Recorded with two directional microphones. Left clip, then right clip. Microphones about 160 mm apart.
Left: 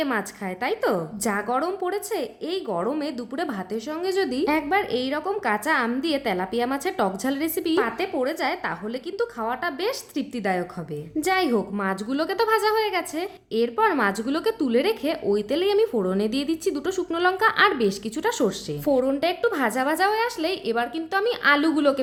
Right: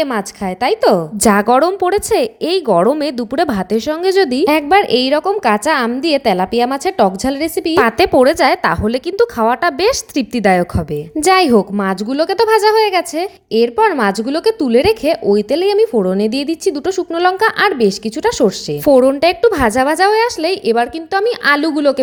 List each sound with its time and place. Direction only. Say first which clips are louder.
0.0 s a woman's voice: right 9 dB; 35° right (ahead or behind)
7.8 s a woman's voice: right 17 dB; 55° right (ahead or behind); by 22.0 s 35° right (ahead or behind)